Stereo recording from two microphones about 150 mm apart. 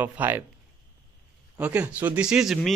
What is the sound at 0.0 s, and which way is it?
Speech, 10° right (ahead or behind).